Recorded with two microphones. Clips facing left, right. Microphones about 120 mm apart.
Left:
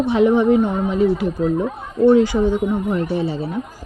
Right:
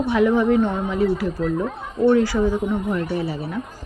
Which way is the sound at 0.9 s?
20° left (ahead or behind).